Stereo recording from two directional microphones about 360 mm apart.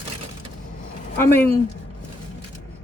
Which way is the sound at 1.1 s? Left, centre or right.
Centre.